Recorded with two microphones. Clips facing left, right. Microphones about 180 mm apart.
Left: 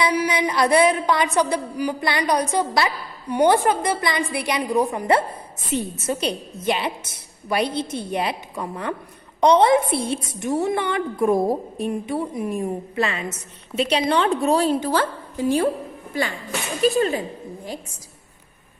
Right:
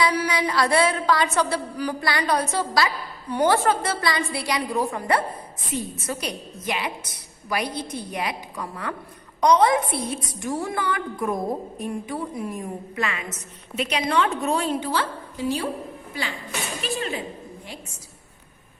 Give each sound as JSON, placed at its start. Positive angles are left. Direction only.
{"t": 0.0, "sound": "a woman's voice", "side_deg": 15}
{"t": 16.8, "sound": "a woman's voice", "side_deg": 40}